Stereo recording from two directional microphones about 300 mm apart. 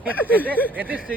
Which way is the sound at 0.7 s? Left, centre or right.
Centre.